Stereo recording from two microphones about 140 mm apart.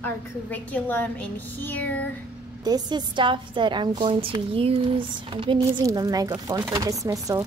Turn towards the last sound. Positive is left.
turn(degrees=-25)  # may be behind; listen again after turning